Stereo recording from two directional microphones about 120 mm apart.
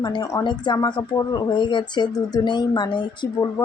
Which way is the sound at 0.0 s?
30° left (ahead or behind).